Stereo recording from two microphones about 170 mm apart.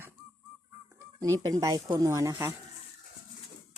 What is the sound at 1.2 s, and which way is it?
Speech, 20° right (ahead or behind).